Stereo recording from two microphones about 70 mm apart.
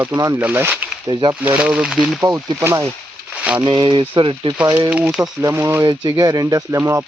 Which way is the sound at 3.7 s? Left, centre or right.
Right.